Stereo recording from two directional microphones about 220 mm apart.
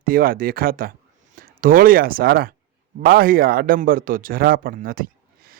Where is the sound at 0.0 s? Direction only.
40° right (ahead or behind).